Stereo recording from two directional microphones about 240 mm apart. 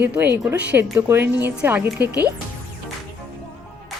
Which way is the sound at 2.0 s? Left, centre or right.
Right.